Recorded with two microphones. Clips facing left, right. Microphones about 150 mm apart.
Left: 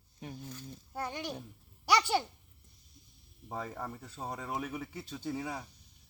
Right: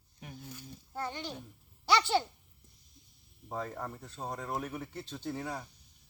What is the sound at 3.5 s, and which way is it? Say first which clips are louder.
Speech: right 1 dB; 5° left (ahead or behind).